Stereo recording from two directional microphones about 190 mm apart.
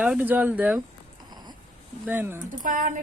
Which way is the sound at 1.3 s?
20° right (ahead or behind).